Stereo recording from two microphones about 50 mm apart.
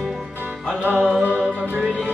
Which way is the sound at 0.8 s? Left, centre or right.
Right.